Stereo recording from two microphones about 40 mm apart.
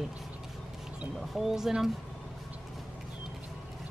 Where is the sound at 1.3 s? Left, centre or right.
Centre.